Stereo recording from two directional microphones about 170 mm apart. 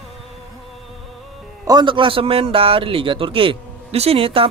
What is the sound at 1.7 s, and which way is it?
A man's voice, 25° right (ahead or behind).